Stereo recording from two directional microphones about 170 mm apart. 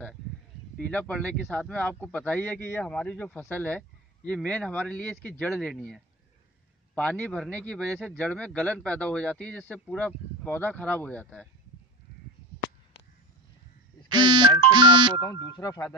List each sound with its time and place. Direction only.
0.7 s speech: 5° left (ahead or behind)
14.1 s speech: 25° right (ahead or behind)
15.5 s speech: 25° left (ahead or behind)